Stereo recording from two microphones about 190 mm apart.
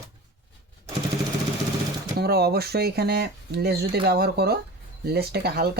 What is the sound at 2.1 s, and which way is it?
Speech, 55° right (ahead or behind).